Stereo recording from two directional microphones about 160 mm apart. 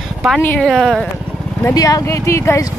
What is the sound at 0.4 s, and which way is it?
Speech, 10° left (ahead or behind).